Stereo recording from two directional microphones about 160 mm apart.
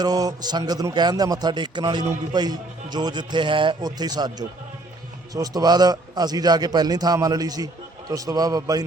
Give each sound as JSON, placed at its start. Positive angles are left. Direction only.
{"t": 0.0, "sound": "a man's voice", "side_deg": -25}